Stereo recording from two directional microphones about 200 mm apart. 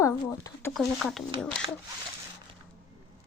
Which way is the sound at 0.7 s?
Centre (ahead or behind).